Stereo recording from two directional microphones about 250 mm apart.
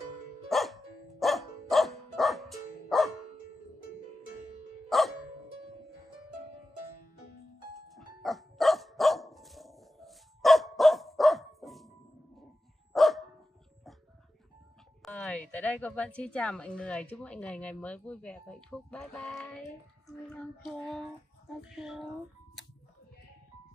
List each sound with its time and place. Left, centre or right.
0.5 s music: centre
4.8 s dog: centre
7.9 s dog: centre
12.9 s dog: centre
15.0 s a woman's voice: centre